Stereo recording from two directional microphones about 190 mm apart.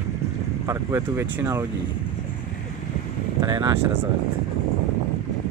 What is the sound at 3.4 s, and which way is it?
Speech, 25° right (ahead or behind).